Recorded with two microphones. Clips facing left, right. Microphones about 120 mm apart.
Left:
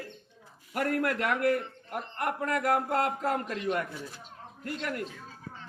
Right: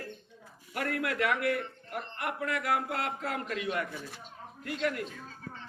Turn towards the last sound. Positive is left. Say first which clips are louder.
# right 2 dB
turn(degrees=45)  # may be behind; listen again after turning